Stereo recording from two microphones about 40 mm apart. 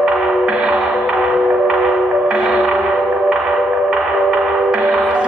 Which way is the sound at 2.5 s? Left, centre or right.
Right.